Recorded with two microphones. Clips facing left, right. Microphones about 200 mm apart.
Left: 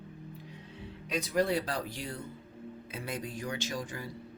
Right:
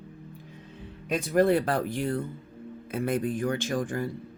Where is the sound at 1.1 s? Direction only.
50° right (ahead or behind).